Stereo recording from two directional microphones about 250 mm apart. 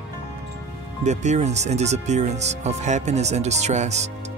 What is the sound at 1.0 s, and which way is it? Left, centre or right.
Speech, right.